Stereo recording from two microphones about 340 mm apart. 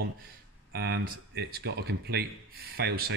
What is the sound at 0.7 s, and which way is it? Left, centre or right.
Speech, right.